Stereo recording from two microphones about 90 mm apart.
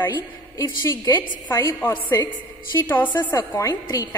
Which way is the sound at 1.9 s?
50° left (ahead or behind).